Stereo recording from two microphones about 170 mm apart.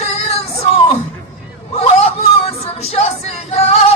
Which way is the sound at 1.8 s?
35° left (ahead or behind).